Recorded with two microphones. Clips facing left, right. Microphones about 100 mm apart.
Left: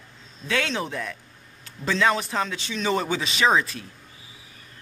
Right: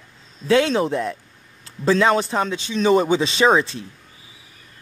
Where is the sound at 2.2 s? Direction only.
25° right (ahead or behind).